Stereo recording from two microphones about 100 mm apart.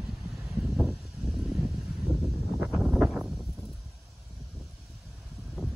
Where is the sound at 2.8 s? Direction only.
5° right (ahead or behind).